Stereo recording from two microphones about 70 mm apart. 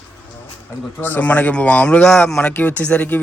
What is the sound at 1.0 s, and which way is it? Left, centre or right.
Speech, left.